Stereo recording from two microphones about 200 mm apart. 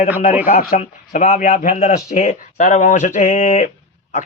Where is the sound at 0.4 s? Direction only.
45° left (ahead or behind).